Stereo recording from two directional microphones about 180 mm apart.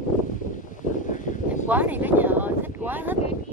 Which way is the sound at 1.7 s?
10° right (ahead or behind).